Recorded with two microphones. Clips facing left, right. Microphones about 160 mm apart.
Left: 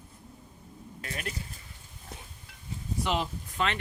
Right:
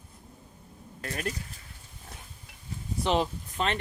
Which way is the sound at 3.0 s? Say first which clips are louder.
Right 4 dB; 30° right (ahead or behind).